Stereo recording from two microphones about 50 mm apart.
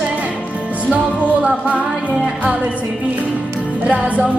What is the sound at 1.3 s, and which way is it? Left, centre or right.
Music, right.